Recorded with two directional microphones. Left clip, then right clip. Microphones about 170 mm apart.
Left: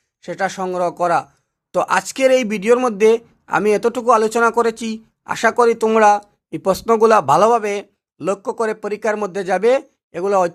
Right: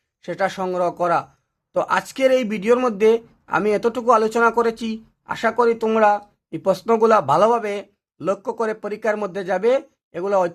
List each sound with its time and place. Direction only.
0.2 s speech: 20° left (ahead or behind)